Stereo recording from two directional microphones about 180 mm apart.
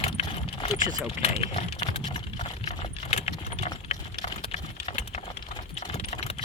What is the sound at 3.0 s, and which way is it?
Keys jangling, 35° left (ahead or behind).